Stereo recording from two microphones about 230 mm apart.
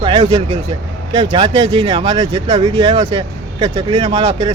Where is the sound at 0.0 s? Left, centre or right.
Right.